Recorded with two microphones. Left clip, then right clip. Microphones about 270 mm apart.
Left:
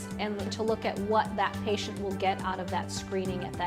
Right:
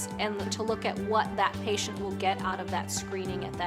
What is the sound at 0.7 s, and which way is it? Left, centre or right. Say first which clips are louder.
Speech: left 1 dB; left.